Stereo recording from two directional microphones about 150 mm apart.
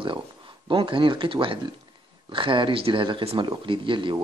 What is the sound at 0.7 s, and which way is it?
Speech, 35° right (ahead or behind).